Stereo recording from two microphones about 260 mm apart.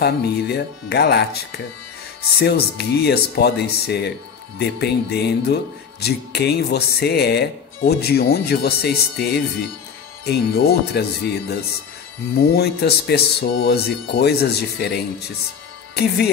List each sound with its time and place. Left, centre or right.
0.0 s speech: left